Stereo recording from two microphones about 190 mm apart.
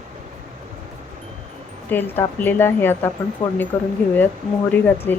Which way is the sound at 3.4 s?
30° left (ahead or behind).